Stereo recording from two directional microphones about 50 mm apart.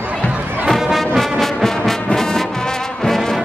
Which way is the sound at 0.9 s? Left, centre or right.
Centre.